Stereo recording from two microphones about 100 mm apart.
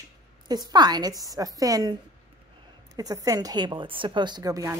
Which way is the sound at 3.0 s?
40° right (ahead or behind).